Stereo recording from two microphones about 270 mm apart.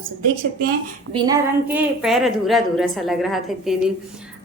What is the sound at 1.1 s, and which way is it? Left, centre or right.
A woman's voice, centre.